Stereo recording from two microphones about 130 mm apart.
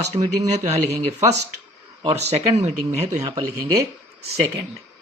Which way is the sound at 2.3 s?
60° right (ahead or behind).